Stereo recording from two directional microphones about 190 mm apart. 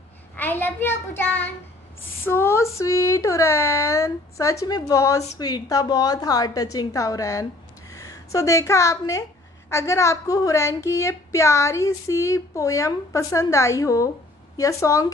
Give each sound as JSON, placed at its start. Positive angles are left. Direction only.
{"t": 0.4, "sound": "a woman's voice", "side_deg": 10}